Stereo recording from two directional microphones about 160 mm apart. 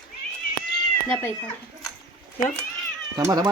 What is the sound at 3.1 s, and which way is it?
Speech, 25° right (ahead or behind).